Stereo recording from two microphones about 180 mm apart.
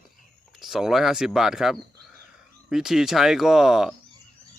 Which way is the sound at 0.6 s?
Centre (ahead or behind).